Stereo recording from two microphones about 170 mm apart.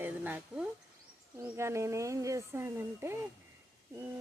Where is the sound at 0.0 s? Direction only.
10° right (ahead or behind).